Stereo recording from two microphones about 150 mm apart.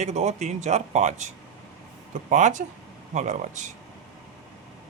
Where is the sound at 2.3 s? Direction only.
55° right (ahead or behind).